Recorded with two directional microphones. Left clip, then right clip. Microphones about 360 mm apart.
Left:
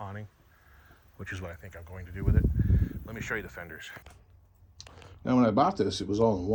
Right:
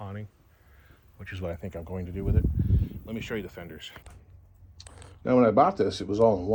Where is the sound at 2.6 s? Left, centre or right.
Centre.